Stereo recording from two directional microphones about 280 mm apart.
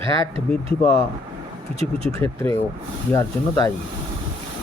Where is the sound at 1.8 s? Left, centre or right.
Left.